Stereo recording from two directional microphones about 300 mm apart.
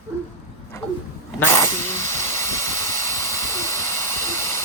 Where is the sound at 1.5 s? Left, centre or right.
Centre.